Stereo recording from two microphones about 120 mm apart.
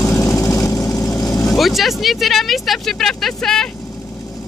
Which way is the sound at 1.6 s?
Centre (ahead or behind).